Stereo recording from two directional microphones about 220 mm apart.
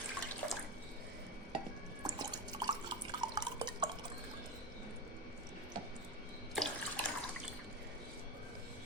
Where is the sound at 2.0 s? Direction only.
20° right (ahead or behind).